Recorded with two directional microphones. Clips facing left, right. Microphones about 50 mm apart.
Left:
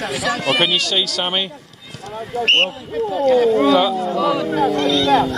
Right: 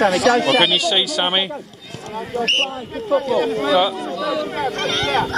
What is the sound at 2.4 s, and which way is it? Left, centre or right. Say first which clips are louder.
Speech: left 4 dB; left.